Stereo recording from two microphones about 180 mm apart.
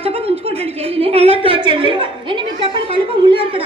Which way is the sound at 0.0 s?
30° right (ahead or behind).